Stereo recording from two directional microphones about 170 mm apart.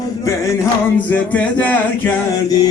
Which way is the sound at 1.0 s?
10° left (ahead or behind).